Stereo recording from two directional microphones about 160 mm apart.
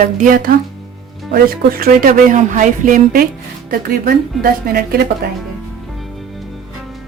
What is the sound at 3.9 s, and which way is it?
Speech, 70° right (ahead or behind).